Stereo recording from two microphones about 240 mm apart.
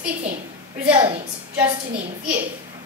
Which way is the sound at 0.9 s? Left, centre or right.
Centre.